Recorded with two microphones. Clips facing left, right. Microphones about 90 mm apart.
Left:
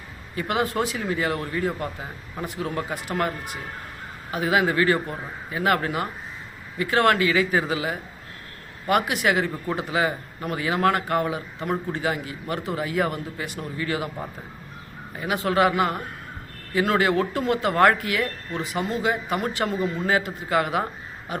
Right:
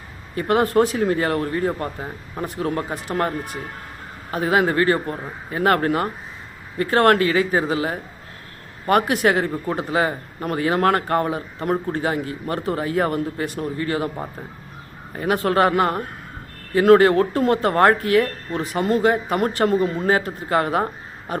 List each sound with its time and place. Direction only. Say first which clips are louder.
0.3 s speech: right 7 dB; 40° right (ahead or behind)
15.1 s speech: right 4 dB; 45° right (ahead or behind)